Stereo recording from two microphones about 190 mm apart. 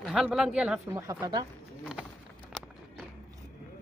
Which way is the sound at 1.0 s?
15° right (ahead or behind).